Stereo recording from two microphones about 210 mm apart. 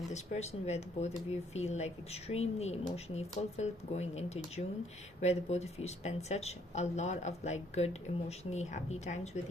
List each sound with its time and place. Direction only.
0.1 s speech: 30° left (ahead or behind)